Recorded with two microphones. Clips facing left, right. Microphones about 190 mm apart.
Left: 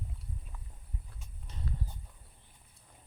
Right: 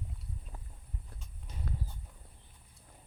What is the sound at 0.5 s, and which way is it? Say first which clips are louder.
Walk: right 2 dB; 35° right (ahead or behind).